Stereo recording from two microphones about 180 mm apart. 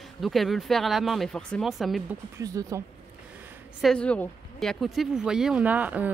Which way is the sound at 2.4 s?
20° right (ahead or behind).